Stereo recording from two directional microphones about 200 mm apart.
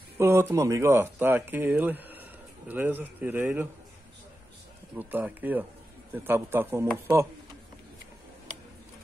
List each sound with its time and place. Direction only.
0.2 s speech: 15° right (ahead or behind)
4.9 s speech: 10° right (ahead or behind)